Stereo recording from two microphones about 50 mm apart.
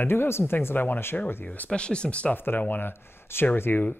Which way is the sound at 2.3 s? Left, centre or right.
Left.